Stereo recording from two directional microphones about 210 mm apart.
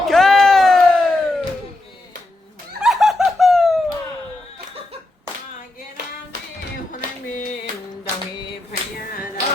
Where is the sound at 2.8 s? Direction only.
Centre (ahead or behind).